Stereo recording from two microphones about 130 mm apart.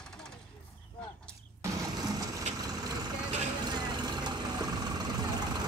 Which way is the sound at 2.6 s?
30° right (ahead or behind).